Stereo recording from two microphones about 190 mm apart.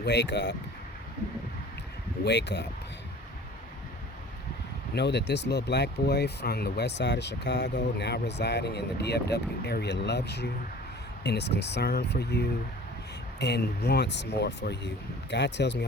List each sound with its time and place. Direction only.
0.0 s speech: 65° left (ahead or behind)
2.2 s speech: 65° left (ahead or behind)
4.9 s speech: 65° left (ahead or behind)